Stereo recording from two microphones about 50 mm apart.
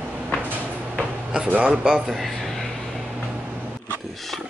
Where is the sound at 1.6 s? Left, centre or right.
Right.